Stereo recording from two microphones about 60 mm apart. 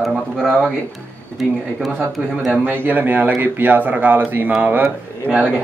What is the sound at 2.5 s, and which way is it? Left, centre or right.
A man's voice, right.